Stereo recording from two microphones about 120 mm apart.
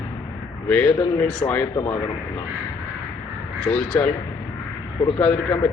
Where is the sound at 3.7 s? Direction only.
10° left (ahead or behind).